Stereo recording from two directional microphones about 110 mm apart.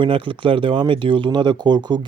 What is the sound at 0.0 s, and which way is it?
Speech, 50° right (ahead or behind).